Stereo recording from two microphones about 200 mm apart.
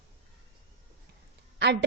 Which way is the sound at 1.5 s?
60° right (ahead or behind).